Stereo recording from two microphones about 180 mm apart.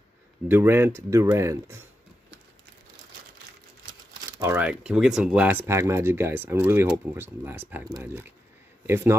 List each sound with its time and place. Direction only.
0.5 s speech: 10° right (ahead or behind)
4.4 s speech: 10° right (ahead or behind)